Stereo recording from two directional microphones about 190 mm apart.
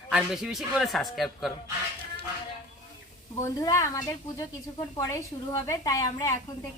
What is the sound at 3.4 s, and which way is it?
Speech, 15° left (ahead or behind).